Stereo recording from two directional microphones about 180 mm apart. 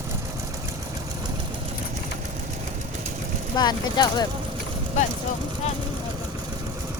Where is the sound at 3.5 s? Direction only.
25° left (ahead or behind).